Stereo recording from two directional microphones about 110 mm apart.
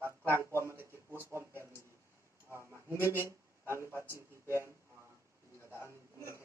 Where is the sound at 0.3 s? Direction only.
25° right (ahead or behind).